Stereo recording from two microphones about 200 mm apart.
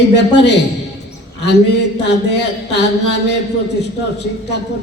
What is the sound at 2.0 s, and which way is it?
A man's voice, 60° left (ahead or behind).